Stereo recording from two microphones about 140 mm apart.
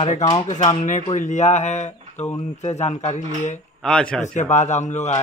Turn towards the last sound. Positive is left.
turn(degrees=55)  # may be behind; listen again after turning